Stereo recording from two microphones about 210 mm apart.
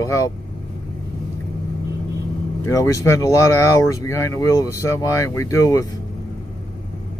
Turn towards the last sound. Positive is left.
turn(degrees=15)  # may be behind; listen again after turning